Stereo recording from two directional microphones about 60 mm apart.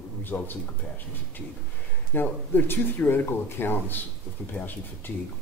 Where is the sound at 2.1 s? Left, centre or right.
Left.